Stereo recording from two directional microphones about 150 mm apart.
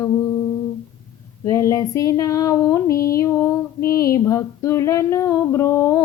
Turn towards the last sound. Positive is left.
turn(degrees=20)  # may be behind; listen again after turning